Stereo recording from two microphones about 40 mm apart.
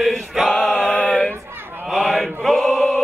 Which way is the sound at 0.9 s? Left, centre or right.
Left.